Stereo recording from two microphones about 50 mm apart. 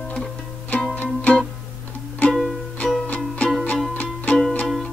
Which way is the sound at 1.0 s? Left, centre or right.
Left.